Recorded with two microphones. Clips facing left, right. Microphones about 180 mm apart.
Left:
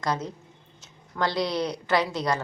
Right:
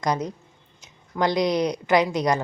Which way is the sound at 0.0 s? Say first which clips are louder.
Right 4 dB; 15° right (ahead or behind).